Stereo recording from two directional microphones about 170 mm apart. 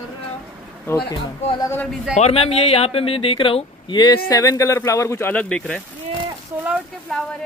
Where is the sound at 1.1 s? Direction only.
25° left (ahead or behind); by 5.8 s 5° left (ahead or behind).